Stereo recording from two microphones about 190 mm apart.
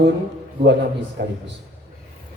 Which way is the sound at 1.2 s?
65° right (ahead or behind).